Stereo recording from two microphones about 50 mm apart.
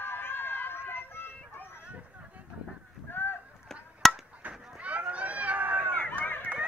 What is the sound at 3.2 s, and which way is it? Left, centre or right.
Rowboat, left.